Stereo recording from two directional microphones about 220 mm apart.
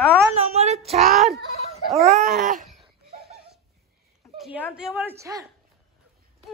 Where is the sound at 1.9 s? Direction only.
30° right (ahead or behind).